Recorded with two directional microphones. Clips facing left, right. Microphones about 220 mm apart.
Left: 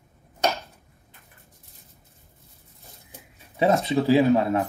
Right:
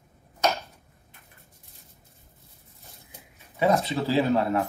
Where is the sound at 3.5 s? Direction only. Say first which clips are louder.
Left 2 dB; 25° left (ahead or behind).